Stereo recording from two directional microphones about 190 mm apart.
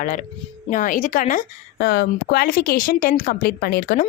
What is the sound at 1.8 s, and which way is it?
A woman's voice, 55° left (ahead or behind).